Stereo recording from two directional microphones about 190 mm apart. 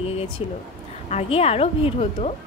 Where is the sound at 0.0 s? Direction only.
30° left (ahead or behind).